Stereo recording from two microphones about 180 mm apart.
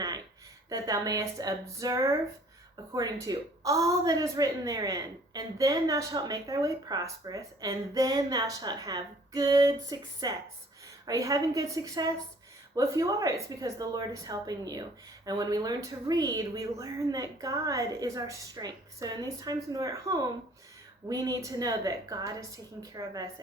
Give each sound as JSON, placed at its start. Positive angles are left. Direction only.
{"t": 0.7, "sound": "a woman's voice", "side_deg": -20}